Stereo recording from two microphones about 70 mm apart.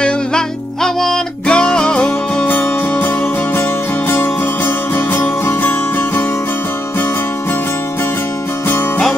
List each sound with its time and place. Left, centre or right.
0.8 s music: centre; by 3.1 s left
4.1 s music: left
8.6 s music: left